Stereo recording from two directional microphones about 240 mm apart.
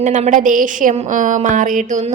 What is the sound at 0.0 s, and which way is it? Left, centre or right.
A woman's voice, right.